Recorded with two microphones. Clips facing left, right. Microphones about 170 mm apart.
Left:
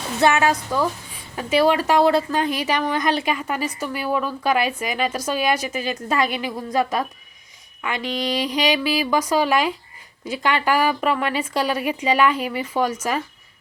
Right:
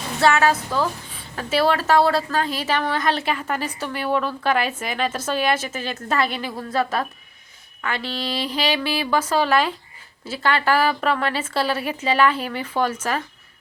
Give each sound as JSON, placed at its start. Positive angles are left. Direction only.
{"t": 0.2, "sound": "a woman's voice", "side_deg": 15}